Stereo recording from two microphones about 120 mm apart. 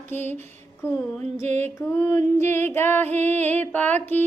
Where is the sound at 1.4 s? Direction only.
75° right (ahead or behind).